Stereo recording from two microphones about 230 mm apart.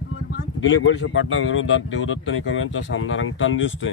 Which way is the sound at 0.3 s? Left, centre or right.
Left.